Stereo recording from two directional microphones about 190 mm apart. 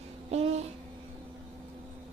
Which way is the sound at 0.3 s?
35° right (ahead or behind).